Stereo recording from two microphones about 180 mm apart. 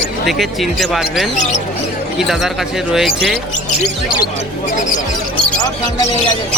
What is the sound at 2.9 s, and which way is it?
Speech, centre (ahead or behind).